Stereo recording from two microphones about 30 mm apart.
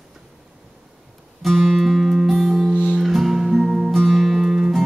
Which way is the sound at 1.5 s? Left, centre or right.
Centre.